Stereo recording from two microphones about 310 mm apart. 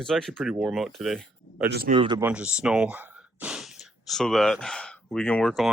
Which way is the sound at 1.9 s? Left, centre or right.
Centre.